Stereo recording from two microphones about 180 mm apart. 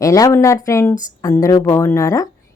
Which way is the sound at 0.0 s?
15° left (ahead or behind).